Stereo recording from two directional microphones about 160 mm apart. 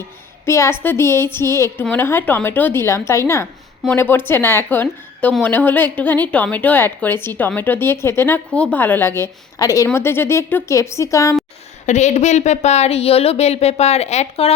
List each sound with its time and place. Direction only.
0.4 s a woman's voice: 15° left (ahead or behind)
11.9 s speech: 45° left (ahead or behind)